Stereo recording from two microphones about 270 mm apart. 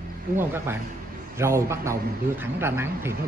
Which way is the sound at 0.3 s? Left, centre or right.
Right.